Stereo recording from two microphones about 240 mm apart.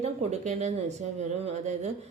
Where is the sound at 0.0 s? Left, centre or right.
Right.